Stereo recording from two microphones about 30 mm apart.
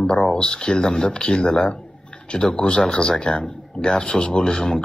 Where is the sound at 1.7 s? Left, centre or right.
Left.